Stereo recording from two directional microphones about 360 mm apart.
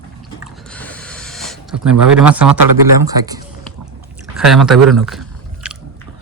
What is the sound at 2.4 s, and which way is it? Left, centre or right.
Speech, right.